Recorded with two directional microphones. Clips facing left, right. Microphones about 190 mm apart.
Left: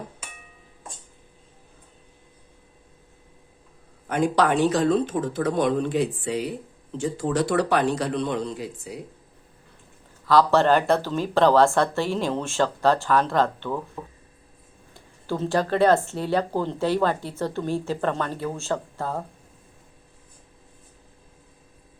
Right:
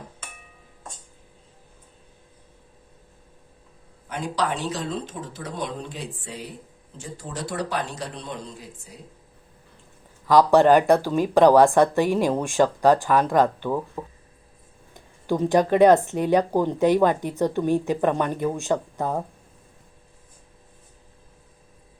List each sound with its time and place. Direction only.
4.0 s a man's voice: 55° left (ahead or behind); by 9.0 s 75° left (ahead or behind)
10.2 s speech: 15° right (ahead or behind)
14.9 s speech: 15° right (ahead or behind)